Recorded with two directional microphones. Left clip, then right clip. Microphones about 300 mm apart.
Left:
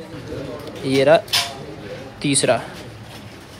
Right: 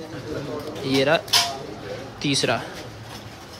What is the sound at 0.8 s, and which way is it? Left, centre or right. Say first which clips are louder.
Speech: left 4 dB; right.